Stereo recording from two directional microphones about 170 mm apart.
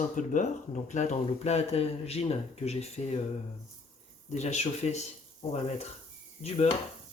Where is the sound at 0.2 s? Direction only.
45° left (ahead or behind).